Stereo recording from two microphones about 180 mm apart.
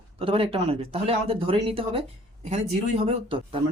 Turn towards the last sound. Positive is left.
turn(degrees=-30)  # may be behind; listen again after turning